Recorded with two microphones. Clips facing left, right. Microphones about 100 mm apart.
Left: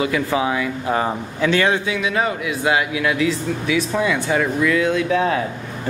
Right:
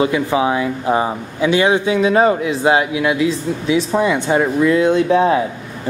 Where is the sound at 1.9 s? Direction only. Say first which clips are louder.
Right 8 dB; 35° right (ahead or behind).